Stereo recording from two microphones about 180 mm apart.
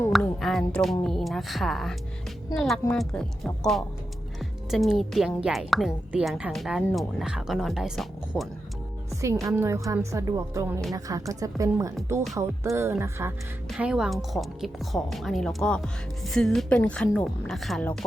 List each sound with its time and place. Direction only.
0.1 s a woman's voice: centre (ahead or behind)
9.0 s a woman's voice: 15° right (ahead or behind); by 18.0 s 5° left (ahead or behind)